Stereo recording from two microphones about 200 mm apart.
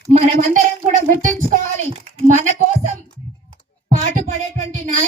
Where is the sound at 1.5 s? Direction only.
40° right (ahead or behind).